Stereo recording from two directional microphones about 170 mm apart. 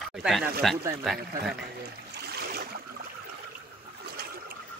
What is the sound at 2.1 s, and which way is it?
Boat, 70° right (ahead or behind).